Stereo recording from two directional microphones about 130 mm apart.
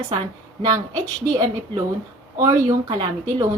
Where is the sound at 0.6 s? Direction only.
30° right (ahead or behind).